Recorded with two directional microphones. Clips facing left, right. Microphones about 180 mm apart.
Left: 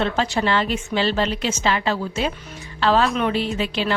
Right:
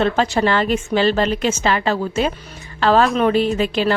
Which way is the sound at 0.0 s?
50° right (ahead or behind).